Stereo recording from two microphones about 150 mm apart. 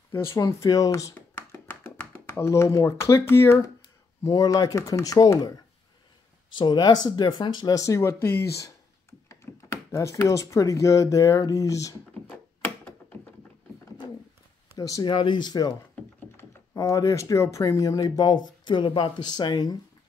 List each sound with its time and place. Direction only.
0.1 s speech: 15° left (ahead or behind)
6.6 s speech: 30° left (ahead or behind)
9.3 s a sound: 20° left (ahead or behind)
14.8 s speech: 25° left (ahead or behind)